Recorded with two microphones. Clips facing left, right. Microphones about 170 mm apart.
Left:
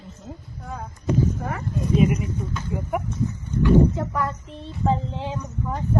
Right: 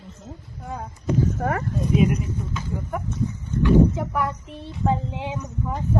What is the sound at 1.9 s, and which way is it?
Speech, centre (ahead or behind).